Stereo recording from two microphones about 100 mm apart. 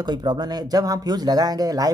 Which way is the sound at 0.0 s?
45° right (ahead or behind).